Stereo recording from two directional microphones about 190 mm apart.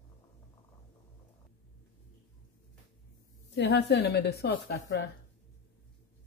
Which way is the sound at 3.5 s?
60° left (ahead or behind).